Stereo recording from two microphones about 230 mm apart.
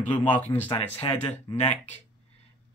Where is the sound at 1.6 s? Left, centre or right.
Left.